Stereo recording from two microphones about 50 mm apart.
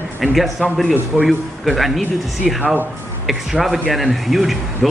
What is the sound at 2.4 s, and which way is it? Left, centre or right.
Speech, right.